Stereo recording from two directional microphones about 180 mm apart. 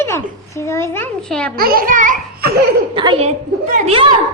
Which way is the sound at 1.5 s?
55° right (ahead or behind).